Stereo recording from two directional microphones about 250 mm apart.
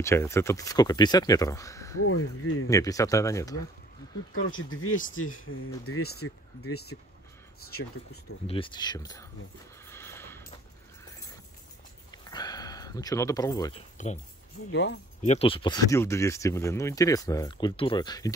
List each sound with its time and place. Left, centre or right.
0.0 s speech: centre
2.0 s speech: left
2.7 s speech: centre
4.3 s speech: left
8.5 s speech: centre
9.8 s a sound: centre
12.3 s speech: centre
13.9 s speech: left
14.7 s speech: left
15.2 s speech: left